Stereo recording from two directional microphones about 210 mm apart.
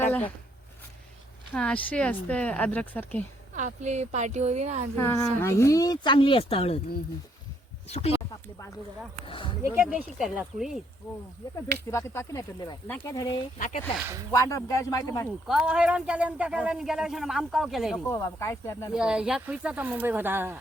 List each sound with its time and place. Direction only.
0.0 s a sound: 10° left (ahead or behind)
1.5 s speech: 5° left (ahead or behind)
3.5 s a woman's voice: 35° right (ahead or behind)
4.9 s speech: 10° left (ahead or behind); by 6.7 s 25° left (ahead or behind)
7.9 s speech: 30° left (ahead or behind)
9.2 s speech: 25° left (ahead or behind)
9.6 s speech: 10° right (ahead or behind)
11.9 s speech: 15° left (ahead or behind)
13.9 s speech: 10° right (ahead or behind)
14.3 s speech: 15° left (ahead or behind)
15.4 s speech: 5° right (ahead or behind)
18.0 s speech: 15° left (ahead or behind)
18.9 s speech: 5° right (ahead or behind)